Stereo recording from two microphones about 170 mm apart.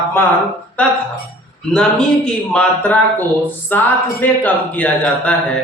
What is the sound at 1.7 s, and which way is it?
A man's voice, 5° left (ahead or behind).